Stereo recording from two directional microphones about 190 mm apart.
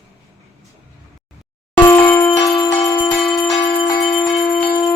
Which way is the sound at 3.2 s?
Centre (ahead or behind).